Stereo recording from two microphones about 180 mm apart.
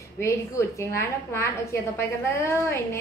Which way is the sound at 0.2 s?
15° left (ahead or behind).